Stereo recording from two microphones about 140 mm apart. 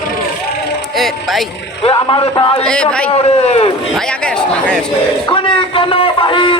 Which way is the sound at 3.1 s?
45° left (ahead or behind).